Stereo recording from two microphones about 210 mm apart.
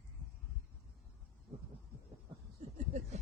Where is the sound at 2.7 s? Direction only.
35° right (ahead or behind).